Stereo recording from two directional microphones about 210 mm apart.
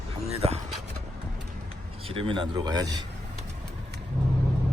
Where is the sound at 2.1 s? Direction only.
25° right (ahead or behind).